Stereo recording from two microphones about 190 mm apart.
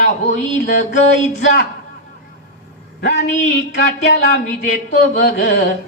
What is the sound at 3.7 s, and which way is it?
A woman's voice, 65° left (ahead or behind).